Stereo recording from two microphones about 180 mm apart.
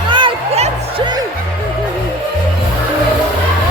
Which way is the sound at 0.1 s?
30° right (ahead or behind).